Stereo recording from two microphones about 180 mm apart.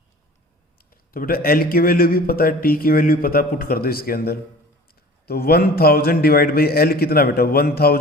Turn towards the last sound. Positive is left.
turn(degrees=55)  # may be behind; listen again after turning